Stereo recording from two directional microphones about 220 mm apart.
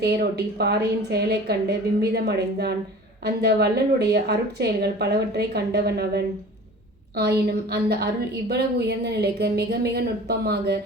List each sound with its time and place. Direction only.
0.0 s a woman's voice: 45° right (ahead or behind)